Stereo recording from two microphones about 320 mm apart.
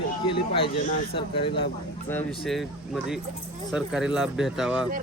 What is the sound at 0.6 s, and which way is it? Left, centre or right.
Speech, centre.